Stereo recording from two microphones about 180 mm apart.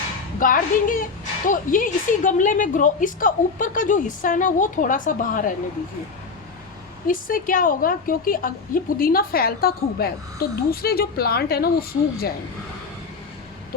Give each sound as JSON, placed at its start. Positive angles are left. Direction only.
{"t": 0.3, "sound": "a woman's voice", "side_deg": 50}
{"t": 7.1, "sound": "a woman's voice", "side_deg": 50}